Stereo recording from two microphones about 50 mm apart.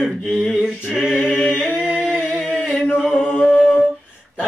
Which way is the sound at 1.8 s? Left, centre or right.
Centre.